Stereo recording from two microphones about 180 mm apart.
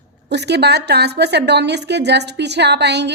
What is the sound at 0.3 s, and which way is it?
Speech, 70° right (ahead or behind).